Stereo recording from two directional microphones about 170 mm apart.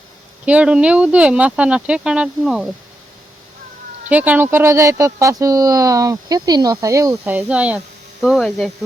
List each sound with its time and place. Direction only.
0.4 s speech: 5° right (ahead or behind)
4.1 s speech: 10° right (ahead or behind)